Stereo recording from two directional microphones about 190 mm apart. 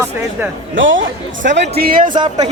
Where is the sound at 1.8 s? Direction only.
50° right (ahead or behind).